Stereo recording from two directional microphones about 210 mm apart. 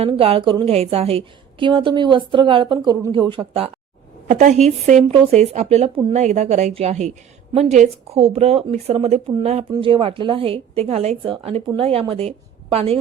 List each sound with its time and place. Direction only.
0.0 s a woman's voice: 25° right (ahead or behind)
4.3 s a woman's voice: 35° right (ahead or behind)